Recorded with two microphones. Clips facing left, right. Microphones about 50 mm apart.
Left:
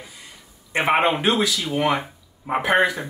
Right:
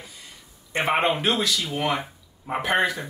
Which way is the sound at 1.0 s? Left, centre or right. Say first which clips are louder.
Left 3 dB; centre.